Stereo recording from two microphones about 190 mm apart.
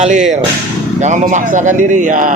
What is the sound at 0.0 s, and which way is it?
Speech, 40° right (ahead or behind).